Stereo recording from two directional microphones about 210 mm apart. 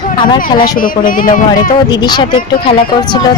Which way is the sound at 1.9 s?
20° left (ahead or behind).